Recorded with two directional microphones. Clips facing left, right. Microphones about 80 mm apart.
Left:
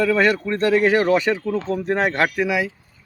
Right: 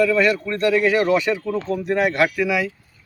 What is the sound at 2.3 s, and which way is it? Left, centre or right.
Speech, left.